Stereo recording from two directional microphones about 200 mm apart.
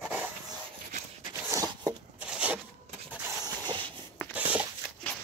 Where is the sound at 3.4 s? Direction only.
20° right (ahead or behind).